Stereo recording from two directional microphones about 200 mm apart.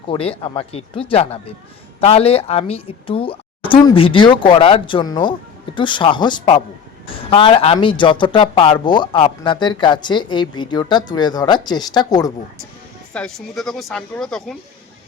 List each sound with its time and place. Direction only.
0.1 s speech: 25° left (ahead or behind)
13.1 s speech: 5° left (ahead or behind)